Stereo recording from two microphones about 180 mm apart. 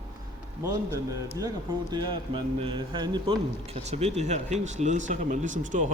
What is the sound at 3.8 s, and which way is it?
Speech, 35° right (ahead or behind).